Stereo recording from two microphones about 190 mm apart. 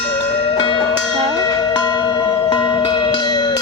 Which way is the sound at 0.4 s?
25° left (ahead or behind).